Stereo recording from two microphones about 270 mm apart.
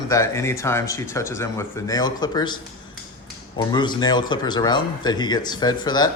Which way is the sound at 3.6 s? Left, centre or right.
Centre.